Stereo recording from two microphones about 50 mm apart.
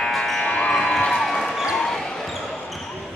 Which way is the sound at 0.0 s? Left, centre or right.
Centre.